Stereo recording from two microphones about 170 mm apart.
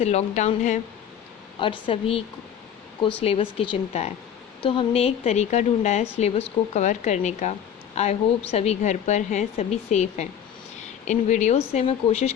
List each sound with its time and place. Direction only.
0.0 s a woman's voice: 40° left (ahead or behind)
1.5 s a woman's voice: 30° left (ahead or behind)